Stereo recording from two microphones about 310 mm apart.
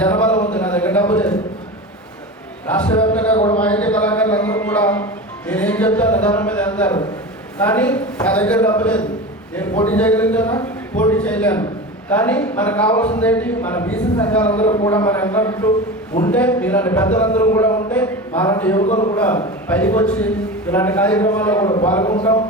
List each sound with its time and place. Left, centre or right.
0.0 s a sound: centre
2.6 s a man's voice: centre
3.3 s a man's voice: centre
3.6 s a man's voice: centre
18.9 s a man's voice: left
19.1 s a man's voice: centre